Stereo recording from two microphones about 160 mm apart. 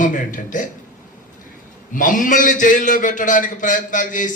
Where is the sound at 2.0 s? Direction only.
55° left (ahead or behind).